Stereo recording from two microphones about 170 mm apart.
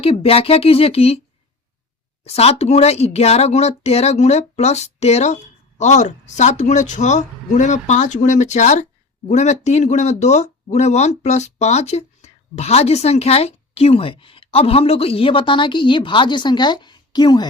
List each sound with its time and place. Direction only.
0.0 s speech: 35° left (ahead or behind)
2.2 s speech: 35° left (ahead or behind)